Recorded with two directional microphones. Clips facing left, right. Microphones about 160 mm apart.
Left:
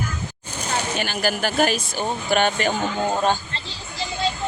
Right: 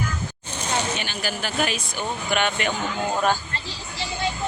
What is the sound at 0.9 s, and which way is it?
Speech, 45° left (ahead or behind).